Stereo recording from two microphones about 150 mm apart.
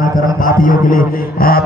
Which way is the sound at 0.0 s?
65° left (ahead or behind).